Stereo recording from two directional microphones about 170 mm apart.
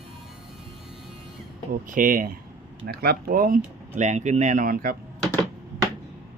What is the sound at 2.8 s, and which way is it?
Speech, 65° right (ahead or behind).